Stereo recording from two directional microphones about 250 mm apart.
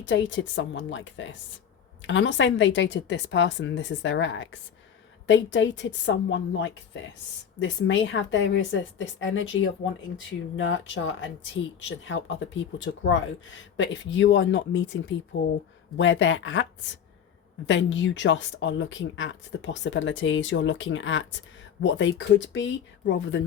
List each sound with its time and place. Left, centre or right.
0.0 s a woman's voice: left